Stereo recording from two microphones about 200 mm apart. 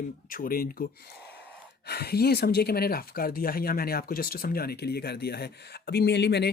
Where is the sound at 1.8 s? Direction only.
50° left (ahead or behind).